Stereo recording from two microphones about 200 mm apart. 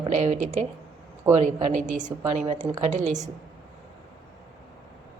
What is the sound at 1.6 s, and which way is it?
A woman's voice, 40° right (ahead or behind).